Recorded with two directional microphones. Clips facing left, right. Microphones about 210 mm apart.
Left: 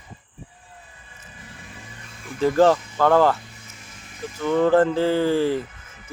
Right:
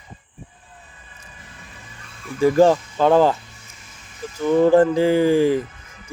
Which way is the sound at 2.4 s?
15° right (ahead or behind).